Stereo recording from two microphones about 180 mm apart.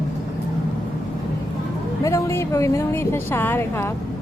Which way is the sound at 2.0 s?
15° left (ahead or behind).